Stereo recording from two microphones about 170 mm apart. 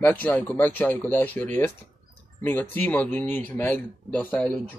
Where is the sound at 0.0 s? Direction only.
10° left (ahead or behind).